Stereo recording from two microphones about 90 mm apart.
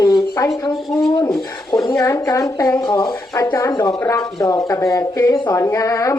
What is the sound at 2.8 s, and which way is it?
Speech, 50° left (ahead or behind).